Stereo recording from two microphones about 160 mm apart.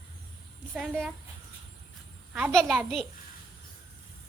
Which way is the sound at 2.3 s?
5° right (ahead or behind).